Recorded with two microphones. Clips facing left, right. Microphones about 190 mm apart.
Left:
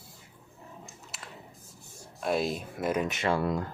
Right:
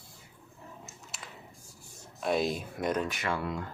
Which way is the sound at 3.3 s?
40° left (ahead or behind).